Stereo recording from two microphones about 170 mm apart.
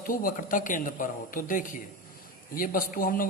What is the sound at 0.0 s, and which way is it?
A man's voice, 55° left (ahead or behind).